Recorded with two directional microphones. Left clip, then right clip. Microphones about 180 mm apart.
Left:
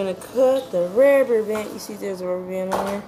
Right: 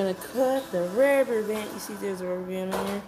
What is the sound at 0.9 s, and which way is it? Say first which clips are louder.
Speech: left 6 dB; 5° right (ahead or behind).